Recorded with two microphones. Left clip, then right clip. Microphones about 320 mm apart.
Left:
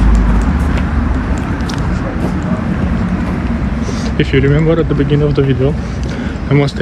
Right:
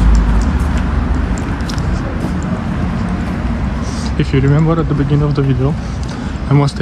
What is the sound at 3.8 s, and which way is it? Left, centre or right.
Speech, centre.